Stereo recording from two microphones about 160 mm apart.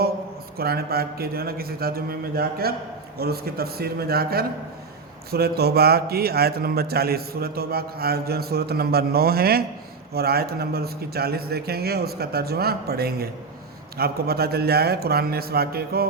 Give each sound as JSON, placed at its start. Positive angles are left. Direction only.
{"t": 0.5, "sound": "a man's voice", "side_deg": -75}